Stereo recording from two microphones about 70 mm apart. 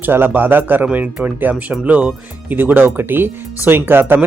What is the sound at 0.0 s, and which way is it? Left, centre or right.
Speech, right.